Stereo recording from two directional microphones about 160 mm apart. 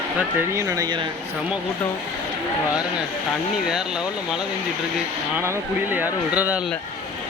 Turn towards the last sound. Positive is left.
turn(degrees=-10)  # may be behind; listen again after turning